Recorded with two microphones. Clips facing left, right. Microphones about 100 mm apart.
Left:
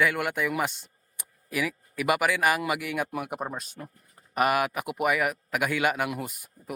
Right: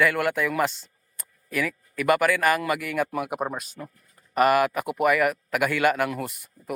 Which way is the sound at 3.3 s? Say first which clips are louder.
Right 4 dB; 60° right (ahead or behind).